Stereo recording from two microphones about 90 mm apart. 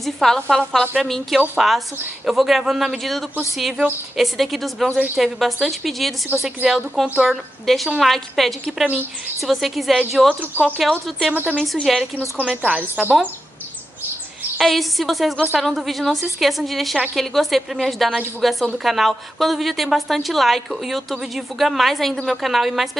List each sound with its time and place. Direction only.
0.0 s a woman's voice: 5° left (ahead or behind)
10.4 s speech: 20° right (ahead or behind)
10.9 s a woman's voice: centre (ahead or behind)
12.4 s a woman's voice: 10° right (ahead or behind)
14.6 s a woman's voice: centre (ahead or behind)